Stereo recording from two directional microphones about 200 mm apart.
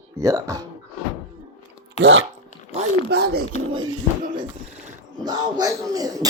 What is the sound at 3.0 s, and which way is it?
Speech, 55° right (ahead or behind).